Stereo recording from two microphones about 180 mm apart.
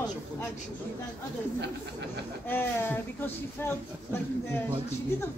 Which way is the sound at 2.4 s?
10° left (ahead or behind).